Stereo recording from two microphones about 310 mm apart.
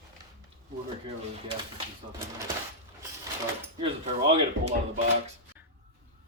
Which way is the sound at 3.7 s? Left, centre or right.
Centre.